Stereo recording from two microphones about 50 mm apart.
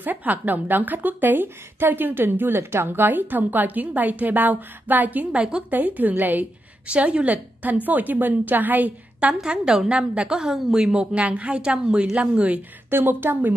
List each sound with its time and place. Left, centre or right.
0.0 s a woman's voice: right
6.9 s a woman's voice: right
9.4 s a woman's voice: centre
12.9 s a woman's voice: right